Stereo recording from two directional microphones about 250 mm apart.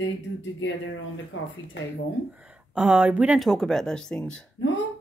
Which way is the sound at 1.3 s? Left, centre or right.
Left.